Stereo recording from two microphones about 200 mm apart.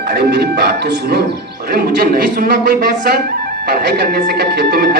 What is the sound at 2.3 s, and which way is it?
Music, 50° right (ahead or behind).